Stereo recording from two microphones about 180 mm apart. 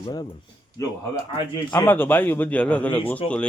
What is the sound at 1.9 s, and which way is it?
A man's voice, 10° left (ahead or behind).